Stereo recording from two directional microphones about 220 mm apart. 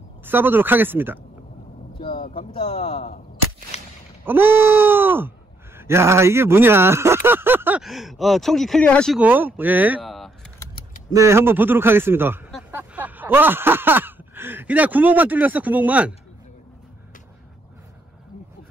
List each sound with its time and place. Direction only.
0.2 s speech: 10° right (ahead or behind)
2.0 s vehicle: 20° left (ahead or behind)
2.3 s a man's voice: 25° left (ahead or behind)
3.7 s a sound: 30° left (ahead or behind)
4.2 s speech: 10° right (ahead or behind)
11.1 s speech: 15° right (ahead or behind)
12.7 s a sound: 10° right (ahead or behind)